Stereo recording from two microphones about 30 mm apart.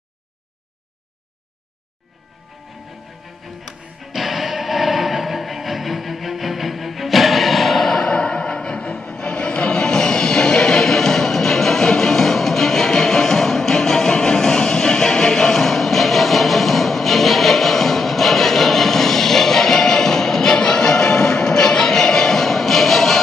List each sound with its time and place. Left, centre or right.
4.0 s music: centre
8.0 s music: left
9.8 s music: left